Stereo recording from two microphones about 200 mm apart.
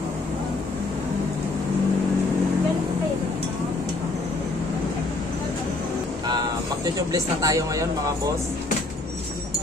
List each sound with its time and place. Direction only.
7.0 s speech: 15° right (ahead or behind)